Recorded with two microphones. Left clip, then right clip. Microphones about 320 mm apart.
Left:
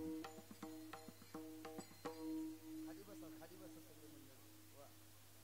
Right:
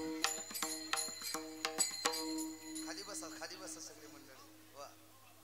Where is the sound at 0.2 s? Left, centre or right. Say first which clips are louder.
Right 16 dB; centre.